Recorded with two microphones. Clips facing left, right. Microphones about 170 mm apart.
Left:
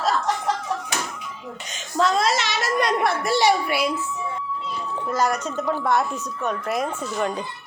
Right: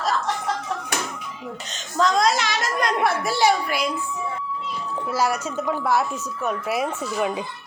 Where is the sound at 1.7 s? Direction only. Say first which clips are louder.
Even; 5° left (ahead or behind).